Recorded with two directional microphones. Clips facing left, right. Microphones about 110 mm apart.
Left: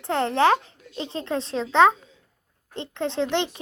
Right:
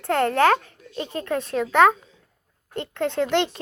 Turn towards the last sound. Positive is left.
turn(degrees=20)  # may be behind; listen again after turning